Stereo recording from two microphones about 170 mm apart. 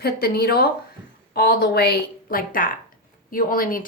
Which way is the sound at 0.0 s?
70° left (ahead or behind).